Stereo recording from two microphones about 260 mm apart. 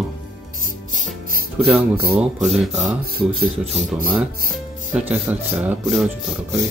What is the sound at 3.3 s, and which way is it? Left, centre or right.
Speech, right.